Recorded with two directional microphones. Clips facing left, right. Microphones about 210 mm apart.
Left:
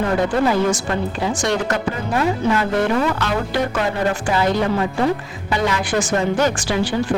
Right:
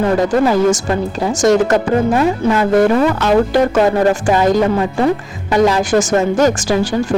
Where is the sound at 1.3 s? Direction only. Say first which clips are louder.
Right 11 dB; 45° right (ahead or behind).